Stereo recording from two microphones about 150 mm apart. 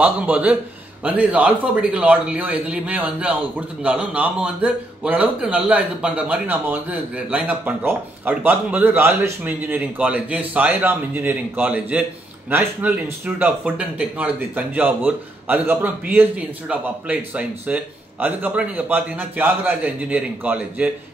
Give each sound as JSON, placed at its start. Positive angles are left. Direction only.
{"t": 0.0, "sound": "a man's voice", "side_deg": -10}